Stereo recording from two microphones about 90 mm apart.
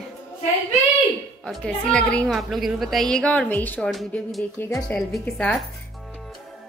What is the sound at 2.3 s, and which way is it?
A woman's voice, centre (ahead or behind).